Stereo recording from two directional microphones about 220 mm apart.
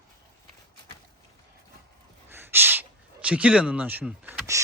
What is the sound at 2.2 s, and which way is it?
Gasp, 10° right (ahead or behind).